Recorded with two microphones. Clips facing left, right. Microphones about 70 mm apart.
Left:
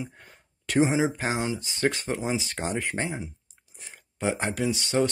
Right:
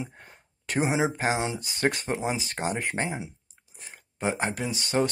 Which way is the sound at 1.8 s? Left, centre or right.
Right.